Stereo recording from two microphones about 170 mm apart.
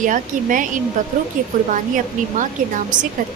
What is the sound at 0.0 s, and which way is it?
A woman's voice, 50° right (ahead or behind).